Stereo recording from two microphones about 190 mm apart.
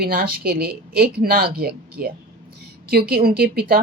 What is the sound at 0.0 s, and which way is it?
A woman's voice, 50° right (ahead or behind).